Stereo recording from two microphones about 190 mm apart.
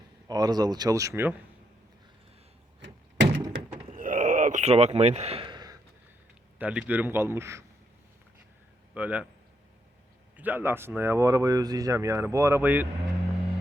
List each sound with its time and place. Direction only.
0.3 s speech: 20° right (ahead or behind)
2.8 s door: 70° right (ahead or behind)
3.9 s a sound: 45° right (ahead or behind); by 5.7 s 25° right (ahead or behind)
6.6 s speech: 5° right (ahead or behind)
9.0 s speech: 5° right (ahead or behind)
10.3 s speech: 10° right (ahead or behind)